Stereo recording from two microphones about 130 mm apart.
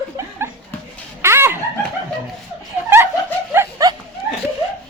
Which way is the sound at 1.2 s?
20° right (ahead or behind).